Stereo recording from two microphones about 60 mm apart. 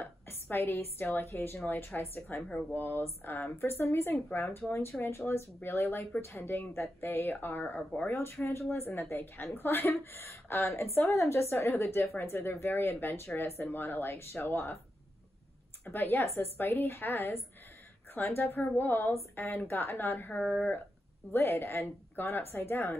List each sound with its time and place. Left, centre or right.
0.0 s a woman's voice: left
7.7 s speech: left
8.1 s a woman's voice: left
15.9 s a woman's voice: left
20.3 s speech: centre
21.3 s a woman's voice: left